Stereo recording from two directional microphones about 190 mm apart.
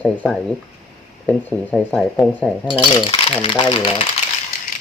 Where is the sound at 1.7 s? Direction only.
5° left (ahead or behind).